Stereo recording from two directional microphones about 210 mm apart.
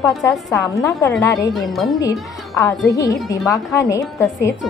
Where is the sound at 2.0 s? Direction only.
15° left (ahead or behind).